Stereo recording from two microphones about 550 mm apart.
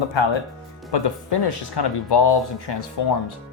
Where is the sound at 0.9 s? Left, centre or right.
Left.